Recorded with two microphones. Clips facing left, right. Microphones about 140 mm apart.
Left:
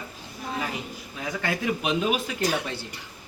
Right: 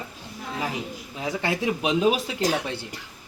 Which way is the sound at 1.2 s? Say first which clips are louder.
Right 2 dB; 30° right (ahead or behind).